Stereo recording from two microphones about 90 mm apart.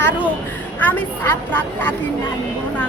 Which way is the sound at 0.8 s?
20° left (ahead or behind).